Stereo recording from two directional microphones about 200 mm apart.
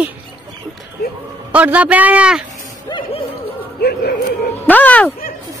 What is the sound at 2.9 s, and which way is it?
Music, 25° left (ahead or behind).